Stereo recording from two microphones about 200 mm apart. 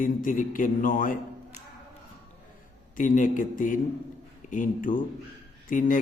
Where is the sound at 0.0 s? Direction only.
45° left (ahead or behind).